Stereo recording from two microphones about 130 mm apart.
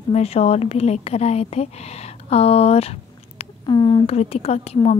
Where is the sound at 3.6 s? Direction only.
35° left (ahead or behind).